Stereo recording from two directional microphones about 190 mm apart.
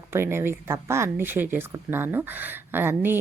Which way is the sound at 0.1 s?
15° right (ahead or behind).